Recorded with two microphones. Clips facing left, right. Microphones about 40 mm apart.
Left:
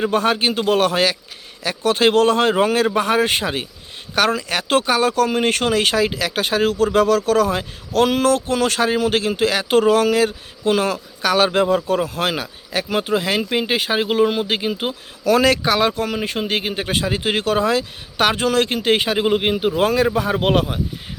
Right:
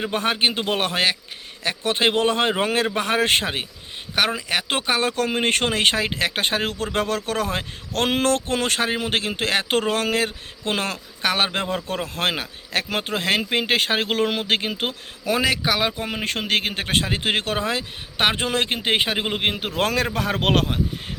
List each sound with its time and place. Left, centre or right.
0.1 s speech: right
4.1 s speech: centre
11.9 s speech: right
15.4 s speech: centre
16.2 s speech: right
16.8 s speech: right
19.4 s speech: right